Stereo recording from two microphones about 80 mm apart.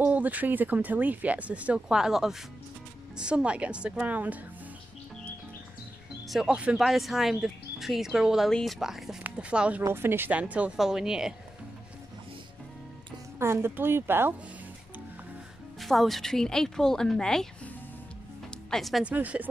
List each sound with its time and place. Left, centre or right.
0.0 s a woman's voice: right
6.2 s a woman's voice: centre
6.8 s speech: centre
8.5 s a woman's voice: centre
9.8 s a woman's voice: right; by 11.3 s centre
13.4 s speech: right
15.8 s speech: centre
18.7 s speech: centre
19.0 s a woman's voice: centre